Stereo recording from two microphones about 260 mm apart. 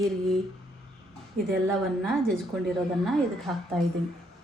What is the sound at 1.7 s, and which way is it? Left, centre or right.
Speech, centre.